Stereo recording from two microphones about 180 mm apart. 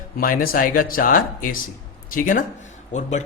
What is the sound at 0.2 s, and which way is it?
A man's voice, 50° left (ahead or behind).